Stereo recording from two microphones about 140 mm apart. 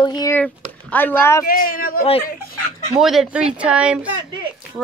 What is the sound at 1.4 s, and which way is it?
Speech, 90° left.